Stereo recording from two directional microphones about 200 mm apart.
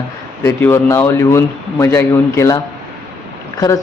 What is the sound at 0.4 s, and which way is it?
Speech, 15° left (ahead or behind).